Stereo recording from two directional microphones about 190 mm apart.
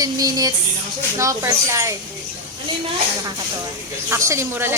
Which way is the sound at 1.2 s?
15° right (ahead or behind).